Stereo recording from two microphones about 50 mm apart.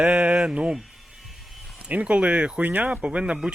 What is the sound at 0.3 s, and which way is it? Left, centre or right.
Speech, centre.